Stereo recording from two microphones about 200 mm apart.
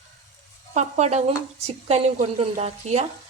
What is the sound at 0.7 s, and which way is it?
Speech, 35° right (ahead or behind).